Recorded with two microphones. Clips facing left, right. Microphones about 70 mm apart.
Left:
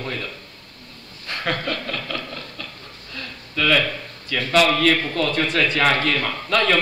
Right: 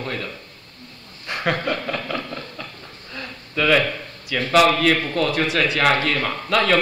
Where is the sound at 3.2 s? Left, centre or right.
Centre.